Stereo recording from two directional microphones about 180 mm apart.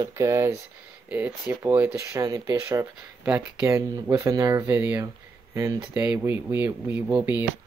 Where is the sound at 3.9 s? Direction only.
20° right (ahead or behind).